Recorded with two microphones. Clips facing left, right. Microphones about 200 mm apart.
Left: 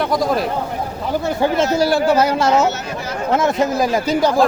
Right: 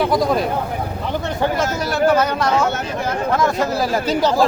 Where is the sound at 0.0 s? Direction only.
Centre (ahead or behind).